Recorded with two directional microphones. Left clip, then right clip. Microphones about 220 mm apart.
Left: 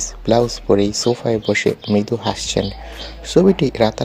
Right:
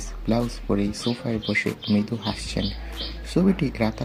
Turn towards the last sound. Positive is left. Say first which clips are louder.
# left 10 dB
turn(degrees=40)  # may be behind; listen again after turning